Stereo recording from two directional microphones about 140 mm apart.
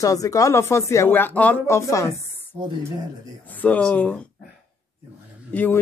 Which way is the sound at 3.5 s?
10° left (ahead or behind).